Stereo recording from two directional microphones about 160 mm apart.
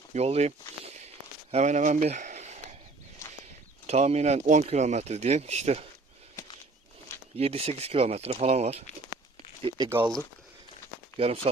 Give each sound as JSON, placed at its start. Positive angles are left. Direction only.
{"t": 0.1, "sound": "speech", "side_deg": -40}
{"t": 3.8, "sound": "speech", "side_deg": -40}
{"t": 7.3, "sound": "speech", "side_deg": -40}
{"t": 9.6, "sound": "speech", "side_deg": -25}